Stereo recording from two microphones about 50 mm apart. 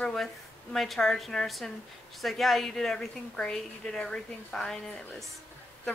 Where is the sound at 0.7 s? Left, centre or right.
Centre.